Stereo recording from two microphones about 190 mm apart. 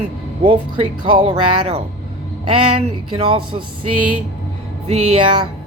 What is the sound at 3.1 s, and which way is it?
Speech, 25° right (ahead or behind).